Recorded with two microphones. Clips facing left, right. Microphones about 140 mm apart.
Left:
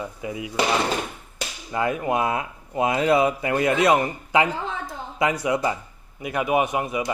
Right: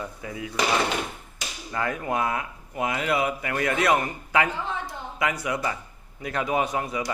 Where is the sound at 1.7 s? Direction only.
20° left (ahead or behind).